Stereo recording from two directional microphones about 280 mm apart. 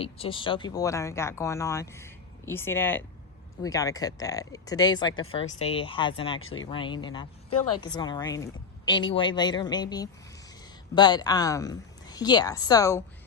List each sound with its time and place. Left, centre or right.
0.0 s speech: centre
6.4 s speech: left
6.7 s speech: centre